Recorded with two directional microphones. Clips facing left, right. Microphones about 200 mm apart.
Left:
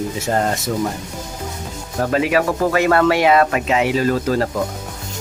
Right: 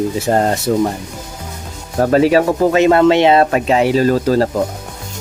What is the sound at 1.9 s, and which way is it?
Speech, 40° right (ahead or behind).